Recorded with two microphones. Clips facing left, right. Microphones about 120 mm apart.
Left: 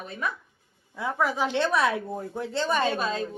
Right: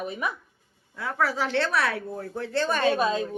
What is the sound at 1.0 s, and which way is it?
Speech, 20° left (ahead or behind).